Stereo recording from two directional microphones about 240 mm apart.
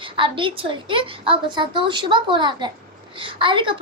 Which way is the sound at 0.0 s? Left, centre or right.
Right.